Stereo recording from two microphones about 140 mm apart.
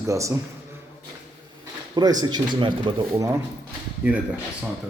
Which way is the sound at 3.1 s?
20° right (ahead or behind).